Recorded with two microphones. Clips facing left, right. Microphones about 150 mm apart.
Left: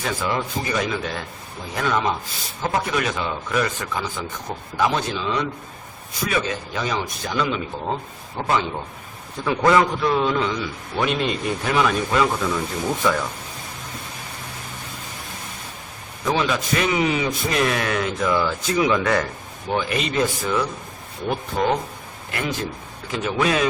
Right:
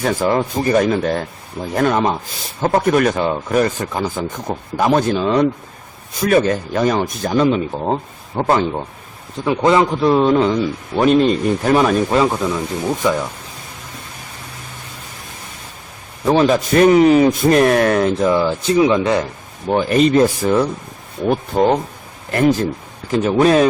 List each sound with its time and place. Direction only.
0.0 s speech: 45° right (ahead or behind)
9.4 s a man's voice: 20° right (ahead or behind); by 12.3 s 35° right (ahead or behind)
13.0 s speech: 20° right (ahead or behind)
16.2 s speech: 40° right (ahead or behind)
18.3 s speech: 30° right (ahead or behind)
19.7 s a man's voice: 40° right (ahead or behind)